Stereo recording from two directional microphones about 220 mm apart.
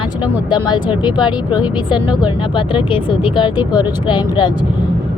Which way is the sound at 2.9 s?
20° left (ahead or behind).